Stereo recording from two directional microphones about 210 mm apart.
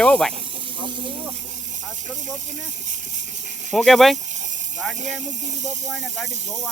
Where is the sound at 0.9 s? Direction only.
25° right (ahead or behind).